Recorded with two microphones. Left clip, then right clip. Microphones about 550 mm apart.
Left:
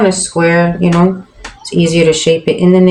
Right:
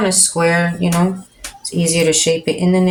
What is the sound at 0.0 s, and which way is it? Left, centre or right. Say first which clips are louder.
Speech: left 4 dB; right.